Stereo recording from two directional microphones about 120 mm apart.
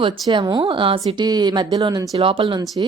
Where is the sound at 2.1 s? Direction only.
50° right (ahead or behind).